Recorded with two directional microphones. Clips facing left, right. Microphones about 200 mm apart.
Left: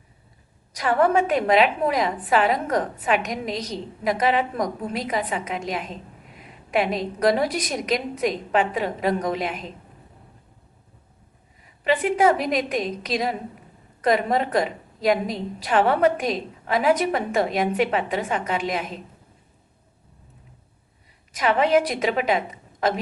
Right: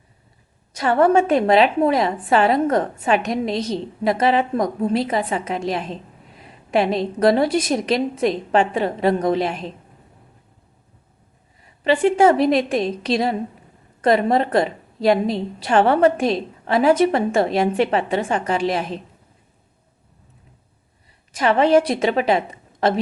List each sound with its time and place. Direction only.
0.7 s a woman's voice: 25° right (ahead or behind)
11.8 s a woman's voice: 30° right (ahead or behind)
21.3 s a woman's voice: 30° right (ahead or behind)